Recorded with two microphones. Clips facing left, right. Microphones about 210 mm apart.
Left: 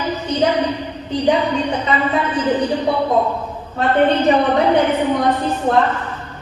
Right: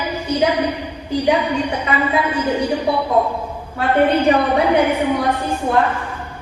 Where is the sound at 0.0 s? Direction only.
10° right (ahead or behind).